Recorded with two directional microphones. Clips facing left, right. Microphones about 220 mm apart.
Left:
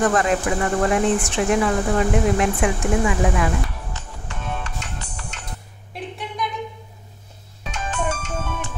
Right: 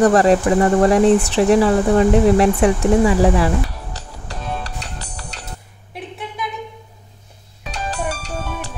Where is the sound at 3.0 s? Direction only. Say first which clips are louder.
Right 6 dB; 35° right (ahead or behind).